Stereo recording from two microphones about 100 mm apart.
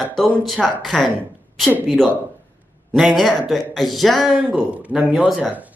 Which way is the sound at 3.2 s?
Centre (ahead or behind).